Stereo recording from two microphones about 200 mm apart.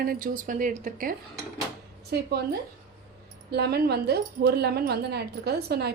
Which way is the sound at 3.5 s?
55° right (ahead or behind).